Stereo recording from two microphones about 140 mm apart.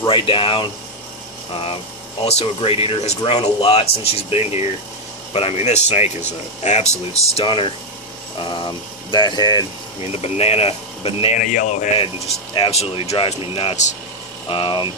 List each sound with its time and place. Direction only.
0.1 s speech: 40° left (ahead or behind)
7.3 s speech: 35° left (ahead or behind)
10.0 s speech: 45° left (ahead or behind)
11.3 s speech: 60° left (ahead or behind)
12.7 s speech: 45° left (ahead or behind)
14.5 s speech: 35° left (ahead or behind)